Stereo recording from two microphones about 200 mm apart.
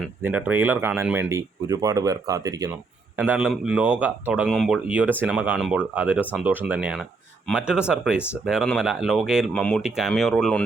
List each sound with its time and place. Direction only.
0.2 s speech: 10° right (ahead or behind)
3.2 s speech: 5° right (ahead or behind)